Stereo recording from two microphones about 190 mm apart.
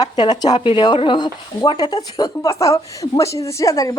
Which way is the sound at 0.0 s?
20° left (ahead or behind).